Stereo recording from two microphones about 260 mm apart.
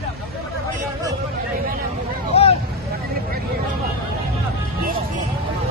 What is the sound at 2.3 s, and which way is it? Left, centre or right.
Vehicle, left.